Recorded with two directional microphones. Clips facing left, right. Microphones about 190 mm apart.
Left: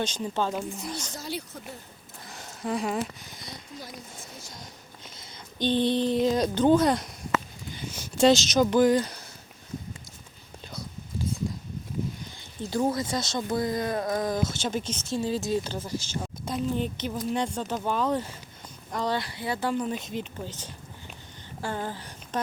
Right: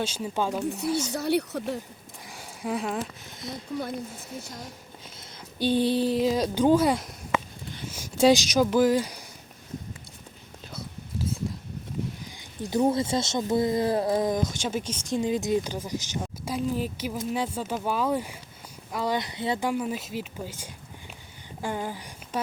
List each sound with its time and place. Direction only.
0.0 s speech: 5° right (ahead or behind)
0.6 s speech: 65° right (ahead or behind)
0.9 s speech: 5° right (ahead or behind)
1.1 s speech: 65° right (ahead or behind)
2.2 s speech: 10° right (ahead or behind)
3.8 s speech: 60° right (ahead or behind)
5.1 s a sound: 10° right (ahead or behind)
8.0 s speech: 10° right (ahead or behind)
12.7 s speech: 25° right (ahead or behind)
14.4 s speech: 10° right (ahead or behind)
16.2 s speech: 5° right (ahead or behind)